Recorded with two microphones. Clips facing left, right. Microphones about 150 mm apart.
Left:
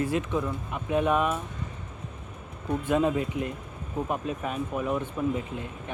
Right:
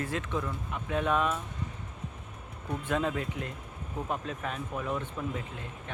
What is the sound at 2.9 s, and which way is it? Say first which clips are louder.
Speech: left 6 dB; 15° left (ahead or behind).